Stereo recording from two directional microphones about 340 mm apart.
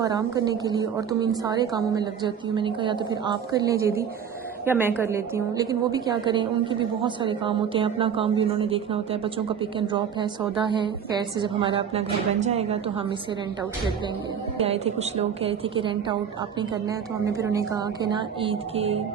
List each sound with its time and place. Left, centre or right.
0.0 s a woman's voice: centre
14.6 s a woman's voice: centre